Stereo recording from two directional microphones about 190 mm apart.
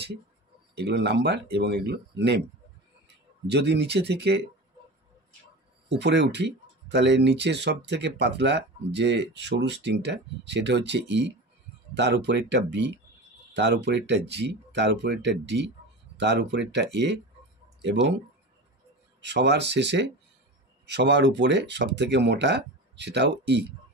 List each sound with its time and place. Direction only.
0.7 s speech: 60° right (ahead or behind)
3.4 s speech: 60° right (ahead or behind)
5.9 s speech: 65° right (ahead or behind)
19.2 s speech: 65° right (ahead or behind)